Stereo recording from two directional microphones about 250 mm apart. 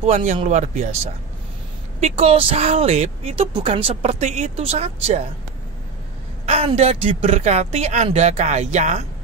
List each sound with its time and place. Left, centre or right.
0.0 s speech: right
2.0 s speech: right
6.4 s speech: right